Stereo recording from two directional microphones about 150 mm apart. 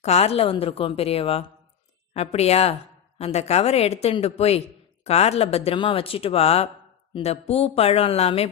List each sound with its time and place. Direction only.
0.0 s speech: 45° left (ahead or behind)